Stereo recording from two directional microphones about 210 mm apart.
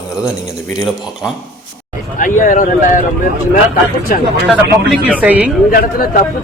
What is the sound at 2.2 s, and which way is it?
Speech, 40° left (ahead or behind).